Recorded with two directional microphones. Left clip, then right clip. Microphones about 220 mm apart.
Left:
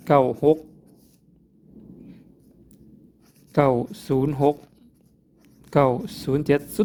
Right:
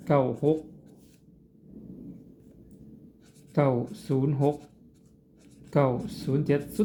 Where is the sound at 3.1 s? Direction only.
45° left (ahead or behind).